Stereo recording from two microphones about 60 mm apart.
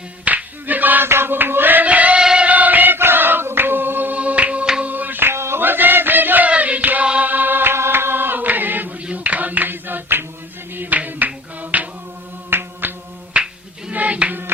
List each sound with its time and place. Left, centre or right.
0.3 s a sound: right
2.2 s music: centre
2.5 s choir: right
4.8 s chant: right
6.5 s music: right
9.0 s a sound: right
12.5 s music: right
13.3 s a sound: centre
13.9 s music: right